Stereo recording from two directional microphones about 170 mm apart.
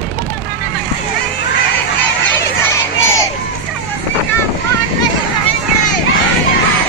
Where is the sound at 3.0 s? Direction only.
15° left (ahead or behind).